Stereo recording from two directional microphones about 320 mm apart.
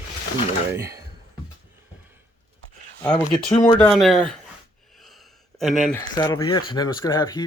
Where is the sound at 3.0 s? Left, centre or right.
Centre.